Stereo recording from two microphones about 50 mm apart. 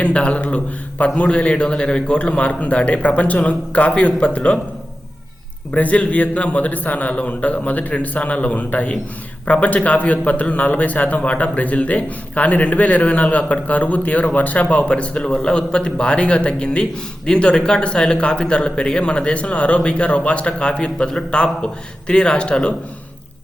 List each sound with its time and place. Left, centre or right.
0.0 s a man's voice: left
5.7 s a man's voice: left